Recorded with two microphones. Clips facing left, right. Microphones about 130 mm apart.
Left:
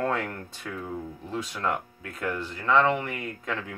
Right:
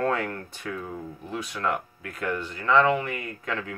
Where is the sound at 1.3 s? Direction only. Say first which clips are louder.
Right 1 dB; 20° left (ahead or behind).